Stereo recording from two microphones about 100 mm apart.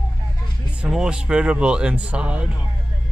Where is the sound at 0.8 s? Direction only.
5° right (ahead or behind).